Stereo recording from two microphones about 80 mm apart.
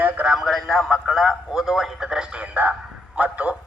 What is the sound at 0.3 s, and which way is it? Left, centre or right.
A man's voice, centre.